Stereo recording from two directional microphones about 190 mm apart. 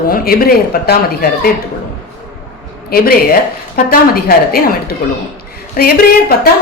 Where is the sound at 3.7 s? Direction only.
50° left (ahead or behind).